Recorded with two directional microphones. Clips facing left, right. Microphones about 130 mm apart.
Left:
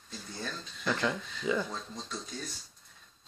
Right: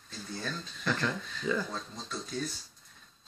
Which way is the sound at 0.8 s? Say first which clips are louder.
Left 1 dB; 15° left (ahead or behind).